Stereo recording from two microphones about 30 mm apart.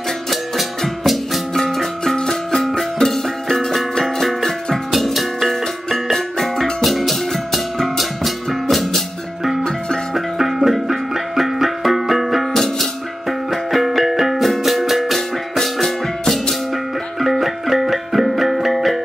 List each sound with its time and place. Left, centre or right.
0.3 s music: centre
4.4 s music: centre
4.9 s music: centre
6.1 s music: centre
6.6 s music: centre
10.1 s music: centre
12.5 s music: centre